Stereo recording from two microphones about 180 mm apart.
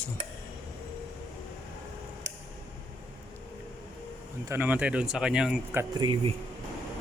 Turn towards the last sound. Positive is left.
turn(degrees=-30)  # may be behind; listen again after turning